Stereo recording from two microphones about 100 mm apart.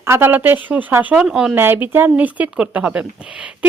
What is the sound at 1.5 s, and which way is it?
Speech, 20° right (ahead or behind).